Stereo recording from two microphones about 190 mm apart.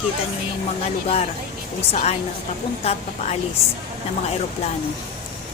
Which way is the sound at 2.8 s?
35° left (ahead or behind).